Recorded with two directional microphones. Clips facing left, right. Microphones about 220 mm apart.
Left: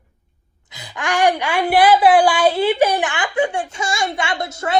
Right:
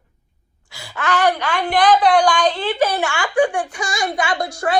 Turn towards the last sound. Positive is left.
turn(degrees=25)  # may be behind; listen again after turning